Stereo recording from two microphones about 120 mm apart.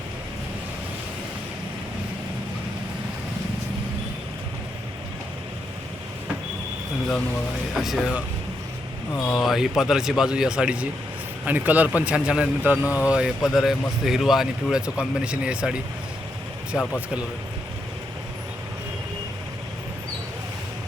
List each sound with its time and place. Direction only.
7.7 s speech: centre (ahead or behind)
9.3 s a man's voice: centre (ahead or behind)
12.8 s speech: 20° left (ahead or behind)
13.1 s speech: 5° right (ahead or behind)
16.7 s speech: centre (ahead or behind)